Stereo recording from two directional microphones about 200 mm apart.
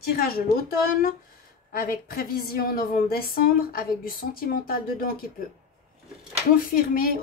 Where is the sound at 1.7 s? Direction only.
45° left (ahead or behind).